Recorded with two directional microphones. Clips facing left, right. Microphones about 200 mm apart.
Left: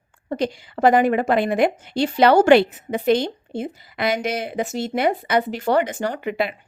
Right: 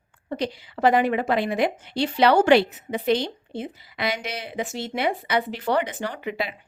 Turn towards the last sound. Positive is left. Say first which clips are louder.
# left 5 dB
turn(degrees=55)  # may be behind; listen again after turning